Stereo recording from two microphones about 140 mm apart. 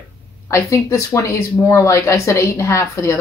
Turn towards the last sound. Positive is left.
turn(degrees=20)  # may be behind; listen again after turning